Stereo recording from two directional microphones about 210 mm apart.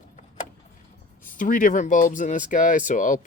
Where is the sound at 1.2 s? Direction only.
40° left (ahead or behind).